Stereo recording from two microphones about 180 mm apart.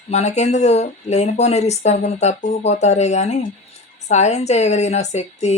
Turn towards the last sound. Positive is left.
turn(degrees=40)  # may be behind; listen again after turning